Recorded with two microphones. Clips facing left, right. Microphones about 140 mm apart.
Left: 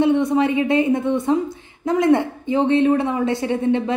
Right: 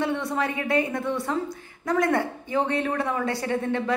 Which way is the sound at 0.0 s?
20° left (ahead or behind).